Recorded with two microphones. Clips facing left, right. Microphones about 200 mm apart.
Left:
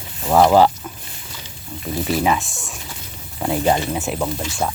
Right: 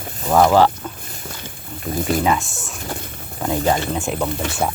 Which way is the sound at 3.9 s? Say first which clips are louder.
Right 1 dB; centre (ahead or behind).